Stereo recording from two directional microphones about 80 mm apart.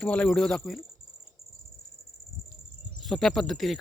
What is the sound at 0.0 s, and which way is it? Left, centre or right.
Speech, centre.